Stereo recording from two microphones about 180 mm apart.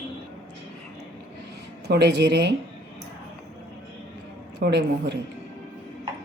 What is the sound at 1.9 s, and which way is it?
Speech, 70° right (ahead or behind).